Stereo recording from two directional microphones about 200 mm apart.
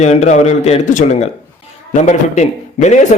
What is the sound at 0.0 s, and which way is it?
A man's voice, 35° left (ahead or behind).